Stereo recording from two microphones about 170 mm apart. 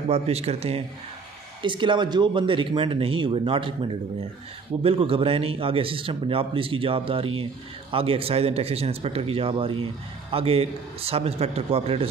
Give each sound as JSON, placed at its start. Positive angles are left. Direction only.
{"t": 0.1, "sound": "a man's voice", "side_deg": -40}